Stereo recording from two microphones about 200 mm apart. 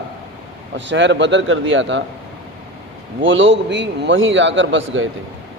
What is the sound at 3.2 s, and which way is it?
A man's voice, 70° right (ahead or behind).